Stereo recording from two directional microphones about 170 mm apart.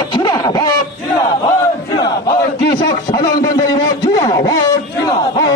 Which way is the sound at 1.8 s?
25° left (ahead or behind).